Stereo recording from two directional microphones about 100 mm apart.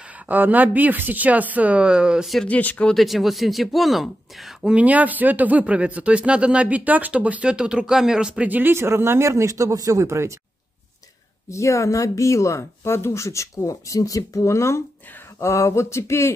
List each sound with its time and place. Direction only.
0.3 s speech: 15° right (ahead or behind)
2.4 s speech: 15° left (ahead or behind)
3.0 s speech: centre (ahead or behind)
4.7 s speech: 15° right (ahead or behind)
11.5 s speech: 30° left (ahead or behind)